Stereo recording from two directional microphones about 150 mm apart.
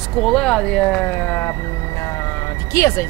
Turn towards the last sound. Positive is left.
turn(degrees=20)  # may be behind; listen again after turning